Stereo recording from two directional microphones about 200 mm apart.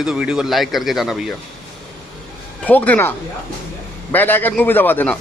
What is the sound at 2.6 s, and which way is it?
Speech, 10° left (ahead or behind).